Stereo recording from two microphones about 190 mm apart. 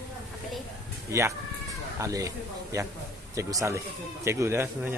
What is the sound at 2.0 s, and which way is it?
Speech, 15° right (ahead or behind).